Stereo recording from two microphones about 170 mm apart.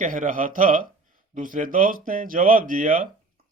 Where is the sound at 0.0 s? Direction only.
50° right (ahead or behind).